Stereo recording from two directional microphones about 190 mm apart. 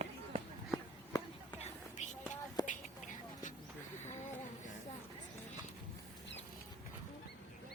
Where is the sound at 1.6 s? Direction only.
40° left (ahead or behind).